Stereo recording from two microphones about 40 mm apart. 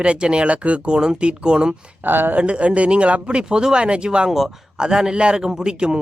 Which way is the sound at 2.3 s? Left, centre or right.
Right.